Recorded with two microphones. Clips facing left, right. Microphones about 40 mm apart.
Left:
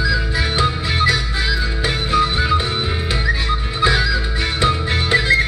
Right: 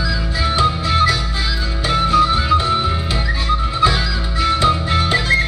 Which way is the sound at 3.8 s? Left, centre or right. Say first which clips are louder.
Left 3 dB; centre.